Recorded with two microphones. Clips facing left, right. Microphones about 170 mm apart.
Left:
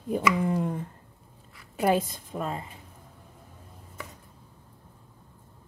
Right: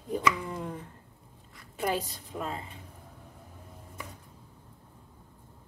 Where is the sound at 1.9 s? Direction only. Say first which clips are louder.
Left 8 dB; 50° left (ahead or behind).